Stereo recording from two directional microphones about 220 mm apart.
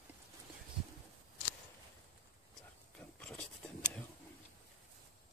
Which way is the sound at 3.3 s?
5° left (ahead or behind).